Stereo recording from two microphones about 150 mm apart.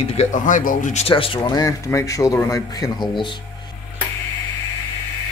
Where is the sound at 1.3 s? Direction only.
25° left (ahead or behind).